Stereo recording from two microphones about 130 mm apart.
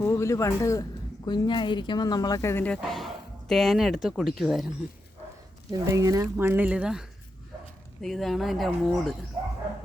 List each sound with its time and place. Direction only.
0.0 s a woman's voice: 20° left (ahead or behind); by 4.7 s centre (ahead or behind)
5.8 s speech: 25° right (ahead or behind); by 7.0 s 5° right (ahead or behind)
8.0 s speech: centre (ahead or behind)